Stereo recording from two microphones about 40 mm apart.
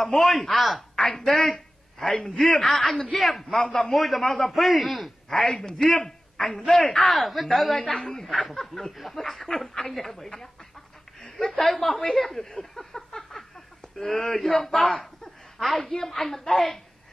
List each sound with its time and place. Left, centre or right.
0.2 s a man's voice: centre
0.9 s a sound: centre
2.2 s a man's voice: centre
3.5 s a man's voice: centre
3.9 s a man's voice: centre
5.3 s a man's voice: centre
7.2 s a man's voice: centre
7.7 s a man's voice: centre
8.3 s a man's voice: centre
8.5 s a man's voice: centre
15.9 s a man's voice: centre